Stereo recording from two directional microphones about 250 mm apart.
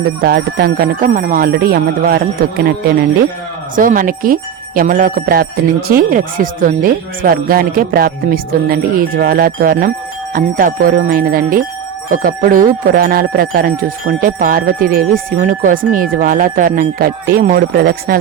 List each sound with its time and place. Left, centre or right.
0.2 s speech: right
3.8 s speech: right